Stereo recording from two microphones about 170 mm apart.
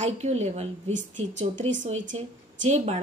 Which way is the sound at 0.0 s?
40° right (ahead or behind).